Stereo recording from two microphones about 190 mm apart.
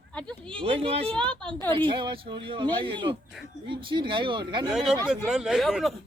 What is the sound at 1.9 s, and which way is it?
Speech, 25° right (ahead or behind).